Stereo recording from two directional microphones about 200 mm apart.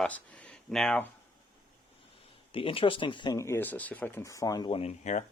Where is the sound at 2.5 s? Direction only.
25° left (ahead or behind).